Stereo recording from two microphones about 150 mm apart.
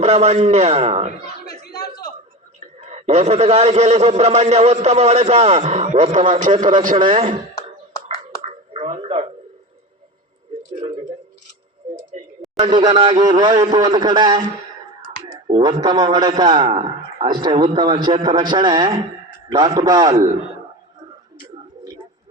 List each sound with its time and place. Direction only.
0.0 s a man's voice: 50° right (ahead or behind)
2.7 s a man's voice: 50° right (ahead or behind)
7.0 s a man's voice: 30° right (ahead or behind)
8.7 s a sound: 40° right (ahead or behind)
12.4 s a sound: centre (ahead or behind)
12.7 s a man's voice: 35° right (ahead or behind)
15.4 s a man's voice: 30° right (ahead or behind)
20.1 s a man's voice: 40° right (ahead or behind)